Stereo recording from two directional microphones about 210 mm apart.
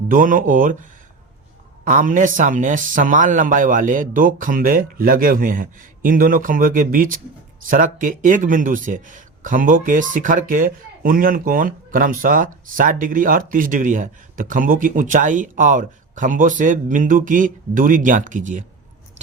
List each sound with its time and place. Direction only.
0.1 s speech: 40° right (ahead or behind)